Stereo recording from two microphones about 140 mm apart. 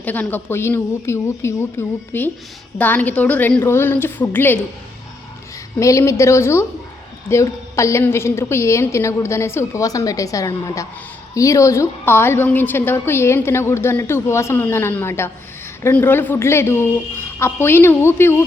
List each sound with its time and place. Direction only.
0.0 s a woman's voice: 10° left (ahead or behind)
5.8 s a woman's voice: 20° left (ahead or behind)